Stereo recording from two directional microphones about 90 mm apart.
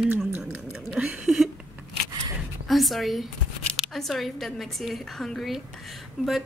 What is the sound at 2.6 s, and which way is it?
A woman's voice, centre (ahead or behind).